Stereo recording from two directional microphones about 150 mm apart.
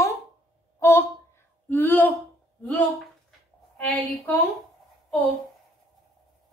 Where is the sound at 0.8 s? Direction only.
15° left (ahead or behind).